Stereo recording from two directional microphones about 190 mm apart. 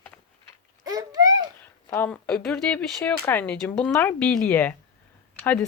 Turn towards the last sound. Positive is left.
turn(degrees=10)  # may be behind; listen again after turning